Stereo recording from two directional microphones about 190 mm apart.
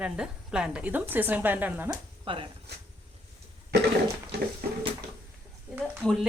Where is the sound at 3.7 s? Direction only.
65° right (ahead or behind).